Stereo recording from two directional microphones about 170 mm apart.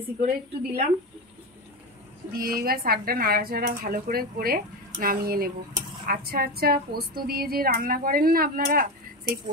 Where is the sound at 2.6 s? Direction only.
60° right (ahead or behind).